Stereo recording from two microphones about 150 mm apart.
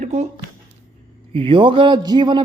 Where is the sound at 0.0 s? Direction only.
50° right (ahead or behind).